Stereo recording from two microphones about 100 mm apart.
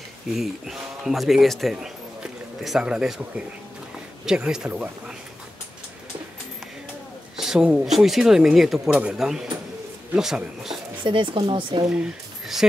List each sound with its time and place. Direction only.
0.3 s speech: 5° right (ahead or behind)
7.3 s speech: 5° right (ahead or behind)
11.1 s speech: 55° right (ahead or behind)
11.9 s speech: 5° right (ahead or behind)